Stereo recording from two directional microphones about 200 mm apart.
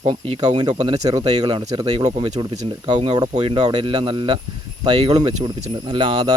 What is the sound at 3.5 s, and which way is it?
Speech, 20° right (ahead or behind).